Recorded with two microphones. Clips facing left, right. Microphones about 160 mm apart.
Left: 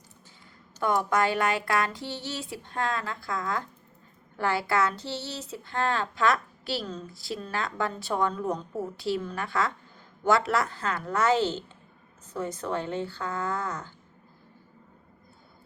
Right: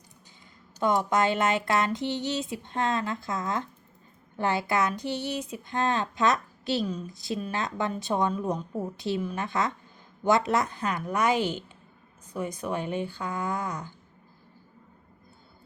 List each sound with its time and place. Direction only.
0.8 s speech: 20° right (ahead or behind)